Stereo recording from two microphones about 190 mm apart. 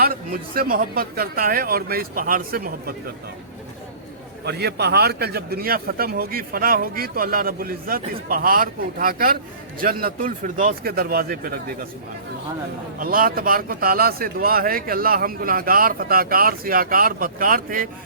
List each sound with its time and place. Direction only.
0.0 s speech: 50° right (ahead or behind)
4.4 s speech: 60° right (ahead or behind)
13.0 s speech: 50° right (ahead or behind)